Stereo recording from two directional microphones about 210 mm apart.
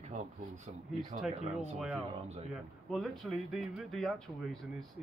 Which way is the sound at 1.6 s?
5° right (ahead or behind).